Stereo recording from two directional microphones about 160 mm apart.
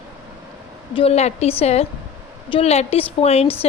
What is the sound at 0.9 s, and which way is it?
Speech, 40° left (ahead or behind).